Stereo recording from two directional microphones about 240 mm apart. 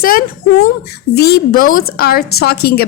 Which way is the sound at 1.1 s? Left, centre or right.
Left.